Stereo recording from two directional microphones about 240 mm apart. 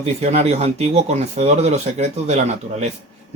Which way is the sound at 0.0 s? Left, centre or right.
Right.